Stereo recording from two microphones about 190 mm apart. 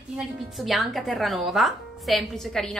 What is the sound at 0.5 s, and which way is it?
A woman's voice, centre (ahead or behind).